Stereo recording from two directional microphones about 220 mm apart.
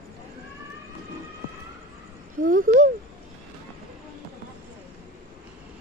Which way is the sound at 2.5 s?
40° right (ahead or behind).